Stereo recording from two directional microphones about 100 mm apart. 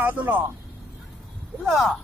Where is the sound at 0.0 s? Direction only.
20° right (ahead or behind).